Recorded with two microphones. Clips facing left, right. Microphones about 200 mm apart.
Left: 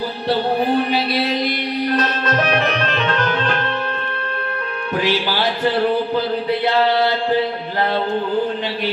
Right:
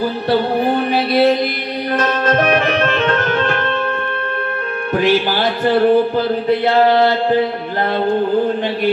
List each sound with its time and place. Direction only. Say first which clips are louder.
0.9 s music: right 6 dB; 50° right (ahead or behind)
4.9 s speech: right 5 dB; 50° right (ahead or behind)